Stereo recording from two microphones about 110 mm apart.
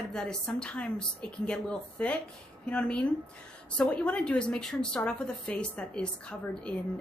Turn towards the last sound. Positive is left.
turn(degrees=10)  # may be behind; listen again after turning